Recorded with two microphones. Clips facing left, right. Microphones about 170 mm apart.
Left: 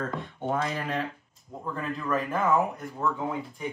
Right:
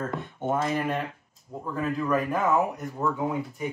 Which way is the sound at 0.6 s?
5° right (ahead or behind).